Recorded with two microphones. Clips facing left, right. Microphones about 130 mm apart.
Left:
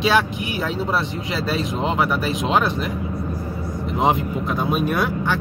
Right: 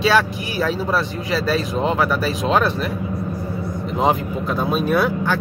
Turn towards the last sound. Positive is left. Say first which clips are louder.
# right 2 dB
turn(degrees=15)  # may be behind; listen again after turning